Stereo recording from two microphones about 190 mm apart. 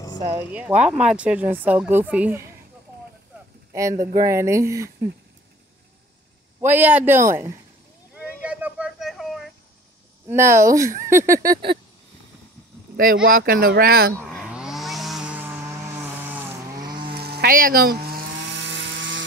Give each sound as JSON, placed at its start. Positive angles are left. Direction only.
{"t": 0.5, "sound": "speech", "side_deg": -10}
{"t": 3.7, "sound": "speech", "side_deg": -15}
{"t": 6.6, "sound": "speech", "side_deg": -10}
{"t": 8.5, "sound": "a sound", "side_deg": -10}
{"t": 10.2, "sound": "speech", "side_deg": -15}
{"t": 12.9, "sound": "speech", "side_deg": -50}
{"t": 14.3, "sound": "chainsaw", "side_deg": 0}
{"t": 16.7, "sound": "chainsaw", "side_deg": -20}
{"t": 17.1, "sound": "chainsaw", "side_deg": -55}